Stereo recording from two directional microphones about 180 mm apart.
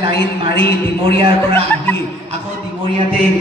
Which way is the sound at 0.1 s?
65° left (ahead or behind).